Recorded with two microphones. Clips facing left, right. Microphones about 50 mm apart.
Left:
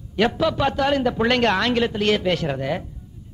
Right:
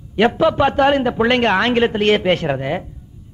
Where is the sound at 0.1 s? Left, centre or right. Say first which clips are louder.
Right 5 dB; right.